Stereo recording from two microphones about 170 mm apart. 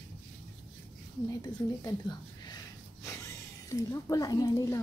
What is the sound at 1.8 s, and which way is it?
Speech, 25° left (ahead or behind).